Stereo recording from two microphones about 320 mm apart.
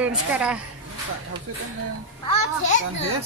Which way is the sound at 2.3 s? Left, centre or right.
Left.